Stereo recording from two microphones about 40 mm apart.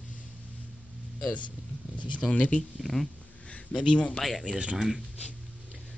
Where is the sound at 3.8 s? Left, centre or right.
Left.